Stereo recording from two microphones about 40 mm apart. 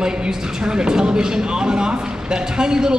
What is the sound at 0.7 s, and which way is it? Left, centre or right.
A man's voice, centre.